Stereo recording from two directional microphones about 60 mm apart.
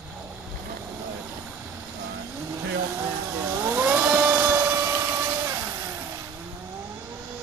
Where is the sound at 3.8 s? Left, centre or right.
Right.